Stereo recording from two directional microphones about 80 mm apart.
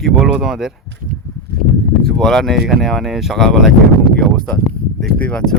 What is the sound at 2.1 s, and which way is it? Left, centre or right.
Speech, centre.